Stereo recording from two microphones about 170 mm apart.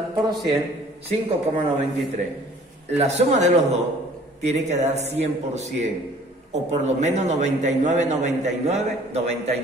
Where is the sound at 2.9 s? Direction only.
40° right (ahead or behind).